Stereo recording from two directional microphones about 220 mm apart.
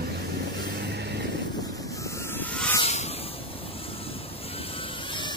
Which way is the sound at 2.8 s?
30° left (ahead or behind).